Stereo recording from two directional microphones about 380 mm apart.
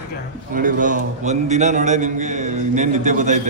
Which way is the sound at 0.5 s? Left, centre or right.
Right.